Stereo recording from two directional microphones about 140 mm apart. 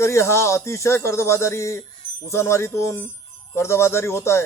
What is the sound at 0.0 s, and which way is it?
Speech, 20° left (ahead or behind).